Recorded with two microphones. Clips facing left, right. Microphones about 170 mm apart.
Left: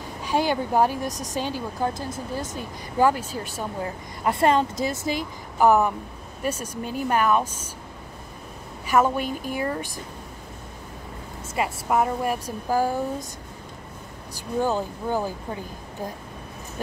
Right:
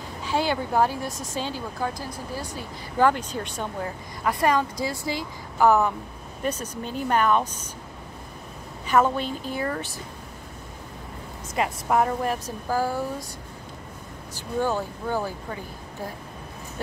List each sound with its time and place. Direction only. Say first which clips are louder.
0.2 s a woman's voice: left 2 dB; 15° left (ahead or behind)
3.1 s a woman's voice: even; 5° left (ahead or behind)
4.2 s a woman's voice: left 2 dB; 25° left (ahead or behind); by 7.7 s 10° left (ahead or behind)
8.8 s a woman's voice: even; 10° left (ahead or behind)
11.5 s a woman's voice: even; 5° left (ahead or behind)
14.6 s a woman's voice: left 1 dB; 15° left (ahead or behind)